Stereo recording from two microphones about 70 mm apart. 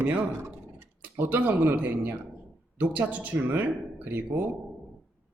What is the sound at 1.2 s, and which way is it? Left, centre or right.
Speech, right.